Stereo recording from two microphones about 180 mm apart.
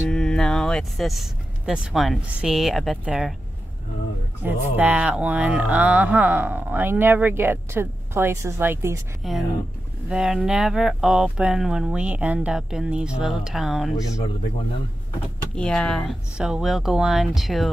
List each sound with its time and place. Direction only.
0.1 s speech: 5° left (ahead or behind)
4.4 s speech: 10° right (ahead or behind)
9.2 s speech: centre (ahead or behind)
13.9 s speech: 20° left (ahead or behind)
15.5 s speech: 5° left (ahead or behind)